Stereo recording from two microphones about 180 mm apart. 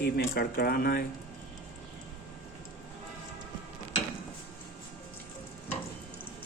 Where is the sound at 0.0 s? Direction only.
60° left (ahead or behind).